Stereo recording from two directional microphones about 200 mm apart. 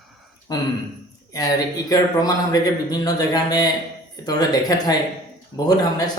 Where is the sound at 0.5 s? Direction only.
20° left (ahead or behind).